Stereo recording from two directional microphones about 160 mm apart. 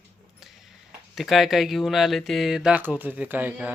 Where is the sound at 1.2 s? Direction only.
Centre (ahead or behind).